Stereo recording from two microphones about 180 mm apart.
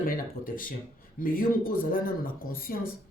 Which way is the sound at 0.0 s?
50° left (ahead or behind).